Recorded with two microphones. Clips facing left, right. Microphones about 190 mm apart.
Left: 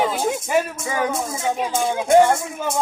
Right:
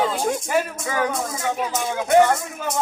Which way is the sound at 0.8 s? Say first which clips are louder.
Left 1 dB; 20° left (ahead or behind).